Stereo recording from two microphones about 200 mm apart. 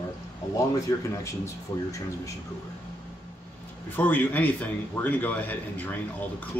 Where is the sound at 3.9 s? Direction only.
10° left (ahead or behind).